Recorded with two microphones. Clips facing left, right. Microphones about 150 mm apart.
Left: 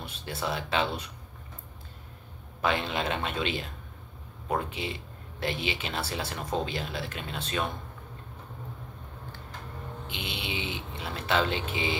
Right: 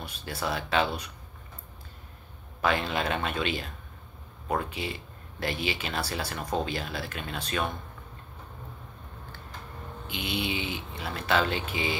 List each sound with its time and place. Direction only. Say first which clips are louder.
0.0 s speech: right 1 dB; 20° left (ahead or behind)
2.6 s speech: right 1 dB; 20° left (ahead or behind)
10.0 s speech: right 7 dB; 25° left (ahead or behind)